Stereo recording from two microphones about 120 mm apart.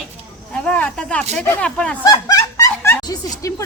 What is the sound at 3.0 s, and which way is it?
Speech, 30° left (ahead or behind).